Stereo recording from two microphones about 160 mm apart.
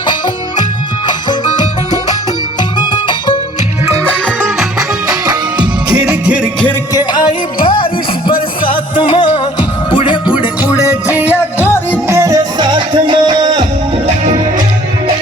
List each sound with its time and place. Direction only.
1.0 s music: 25° left (ahead or behind)
4.0 s music: 5° left (ahead or behind)
5.0 s music: 25° right (ahead or behind)
6.2 s music: 5° right (ahead or behind)
6.9 s music: 25° left (ahead or behind)
10.7 s music: 20° left (ahead or behind)
12.0 s music: 20° right (ahead or behind)